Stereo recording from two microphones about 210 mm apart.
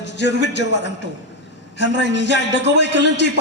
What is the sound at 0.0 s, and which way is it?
A man's voice, 55° left (ahead or behind).